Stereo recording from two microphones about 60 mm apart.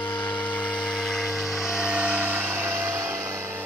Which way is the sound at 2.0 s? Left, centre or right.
Right.